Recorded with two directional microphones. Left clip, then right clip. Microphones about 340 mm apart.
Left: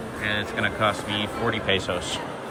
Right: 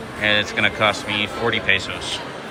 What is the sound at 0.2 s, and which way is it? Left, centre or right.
Speech, centre.